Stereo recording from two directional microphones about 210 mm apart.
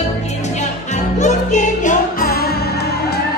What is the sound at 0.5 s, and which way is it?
Music, 35° left (ahead or behind).